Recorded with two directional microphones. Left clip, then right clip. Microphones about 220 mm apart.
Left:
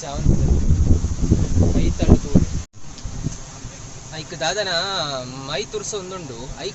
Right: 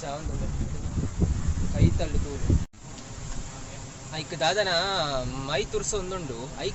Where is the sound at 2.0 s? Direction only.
20° left (ahead or behind).